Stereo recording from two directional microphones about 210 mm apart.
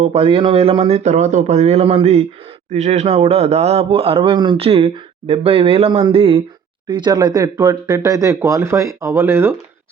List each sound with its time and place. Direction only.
0.0 s a man's voice: 25° right (ahead or behind)